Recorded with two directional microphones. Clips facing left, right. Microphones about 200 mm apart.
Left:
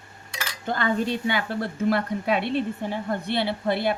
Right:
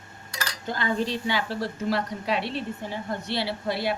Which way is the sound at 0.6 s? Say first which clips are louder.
Left 3 dB; 55° left (ahead or behind).